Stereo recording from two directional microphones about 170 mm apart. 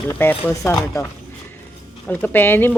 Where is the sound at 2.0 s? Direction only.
10° left (ahead or behind).